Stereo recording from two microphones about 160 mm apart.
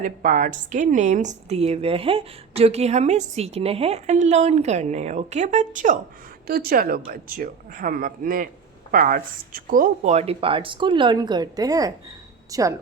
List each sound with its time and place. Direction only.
0.0 s a woman's voice: 55° right (ahead or behind)
6.5 s speech: 70° right (ahead or behind); by 12.7 s 20° right (ahead or behind)